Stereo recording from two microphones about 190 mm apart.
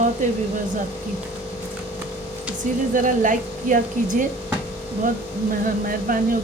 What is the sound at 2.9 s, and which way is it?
Speech, 45° right (ahead or behind).